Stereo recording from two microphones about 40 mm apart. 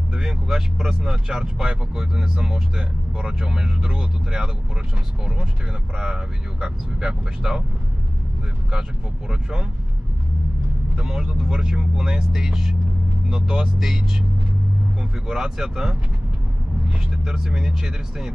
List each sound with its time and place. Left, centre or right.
0.1 s speech: centre
5.9 s speech: centre
9.3 s speech: centre
11.0 s speech: centre
15.2 s speech: centre
17.1 s speech: centre